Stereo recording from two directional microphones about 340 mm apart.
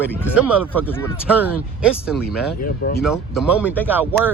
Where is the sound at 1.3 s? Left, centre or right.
Centre.